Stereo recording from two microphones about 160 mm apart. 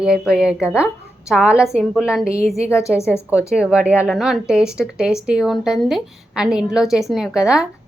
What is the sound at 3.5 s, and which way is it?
A woman's voice, 5° right (ahead or behind).